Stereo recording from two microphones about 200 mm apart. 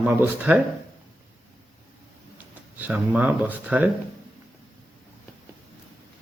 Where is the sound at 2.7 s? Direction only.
10° right (ahead or behind).